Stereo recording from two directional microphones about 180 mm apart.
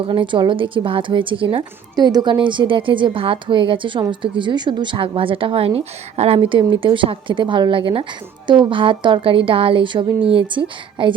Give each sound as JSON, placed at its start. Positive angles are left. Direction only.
{"t": 0.0, "sound": "a woman's voice", "side_deg": -30}